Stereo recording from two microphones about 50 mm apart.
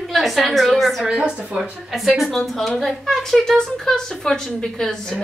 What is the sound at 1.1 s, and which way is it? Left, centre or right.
Speech, centre.